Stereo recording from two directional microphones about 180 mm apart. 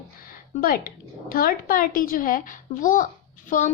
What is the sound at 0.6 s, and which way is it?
Speech, 55° left (ahead or behind).